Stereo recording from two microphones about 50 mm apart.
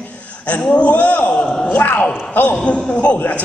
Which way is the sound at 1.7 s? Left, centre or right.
Left.